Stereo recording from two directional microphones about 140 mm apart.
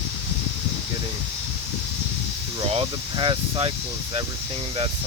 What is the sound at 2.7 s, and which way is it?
Speech, 40° right (ahead or behind).